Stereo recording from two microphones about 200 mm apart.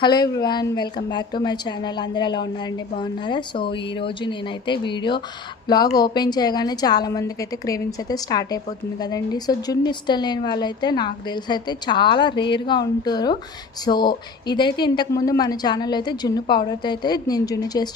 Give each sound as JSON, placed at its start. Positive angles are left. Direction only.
{"t": 0.0, "sound": "a woman's voice", "side_deg": 20}